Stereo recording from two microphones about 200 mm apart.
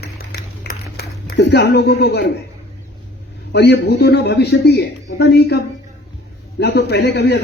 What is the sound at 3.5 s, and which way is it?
A man's voice, 55° left (ahead or behind).